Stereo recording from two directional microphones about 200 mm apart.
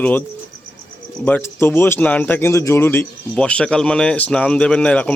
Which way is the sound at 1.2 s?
10° left (ahead or behind).